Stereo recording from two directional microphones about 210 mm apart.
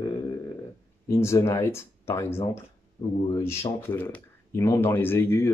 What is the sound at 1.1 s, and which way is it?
Speech, 15° left (ahead or behind).